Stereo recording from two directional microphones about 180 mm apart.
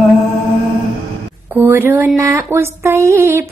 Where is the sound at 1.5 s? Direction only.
10° right (ahead or behind).